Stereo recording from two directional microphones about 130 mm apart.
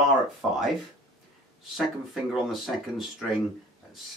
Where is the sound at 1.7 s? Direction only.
Centre (ahead or behind).